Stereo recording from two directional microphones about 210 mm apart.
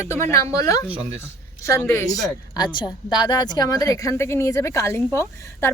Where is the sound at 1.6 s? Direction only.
15° left (ahead or behind).